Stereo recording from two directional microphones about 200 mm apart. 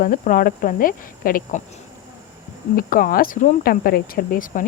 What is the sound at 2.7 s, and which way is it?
Speech, 45° left (ahead or behind).